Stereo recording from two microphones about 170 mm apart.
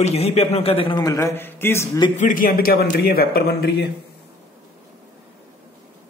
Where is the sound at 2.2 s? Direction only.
50° left (ahead or behind); by 3.9 s 70° left (ahead or behind).